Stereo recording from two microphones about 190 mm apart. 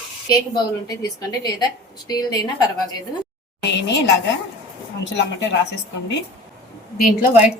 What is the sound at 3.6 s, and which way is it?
A woman's voice, 65° left (ahead or behind).